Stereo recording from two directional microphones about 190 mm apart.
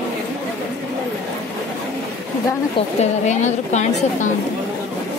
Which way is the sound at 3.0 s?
40° left (ahead or behind).